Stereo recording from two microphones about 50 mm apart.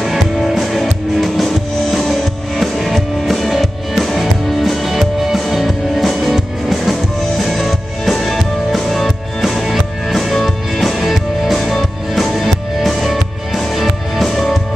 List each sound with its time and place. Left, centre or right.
0.0 s music: centre